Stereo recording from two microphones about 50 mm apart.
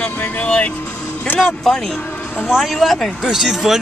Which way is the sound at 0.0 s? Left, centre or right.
Left.